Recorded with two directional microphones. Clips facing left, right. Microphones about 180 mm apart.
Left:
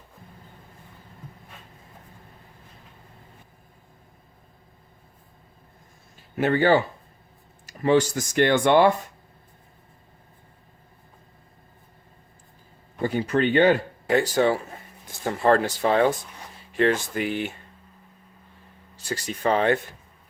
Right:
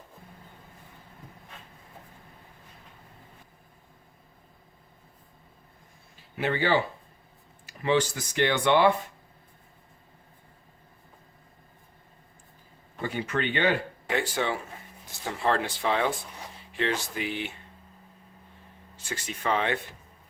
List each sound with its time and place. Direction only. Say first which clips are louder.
6.3 s speech: left 6 dB; 45° left (ahead or behind)
13.0 s speech: left 7 dB; 40° left (ahead or behind)
19.0 s speech: left 6 dB; 35° left (ahead or behind)